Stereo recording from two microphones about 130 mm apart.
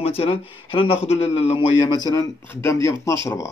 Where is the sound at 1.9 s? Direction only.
30° left (ahead or behind).